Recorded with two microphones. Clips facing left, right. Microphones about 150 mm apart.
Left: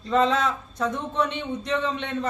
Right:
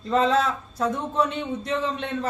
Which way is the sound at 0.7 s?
5° right (ahead or behind).